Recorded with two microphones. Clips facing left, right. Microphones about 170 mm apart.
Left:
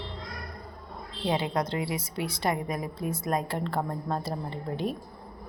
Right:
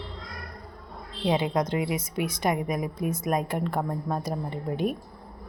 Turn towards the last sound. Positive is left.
turn(degrees=-15)  # may be behind; listen again after turning